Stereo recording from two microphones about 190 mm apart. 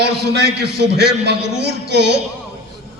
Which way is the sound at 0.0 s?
60° right (ahead or behind).